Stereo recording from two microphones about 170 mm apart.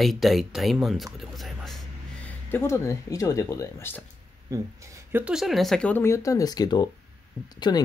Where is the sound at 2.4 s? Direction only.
15° left (ahead or behind).